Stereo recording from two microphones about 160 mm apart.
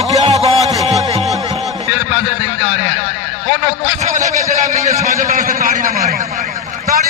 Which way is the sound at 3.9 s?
50° right (ahead or behind).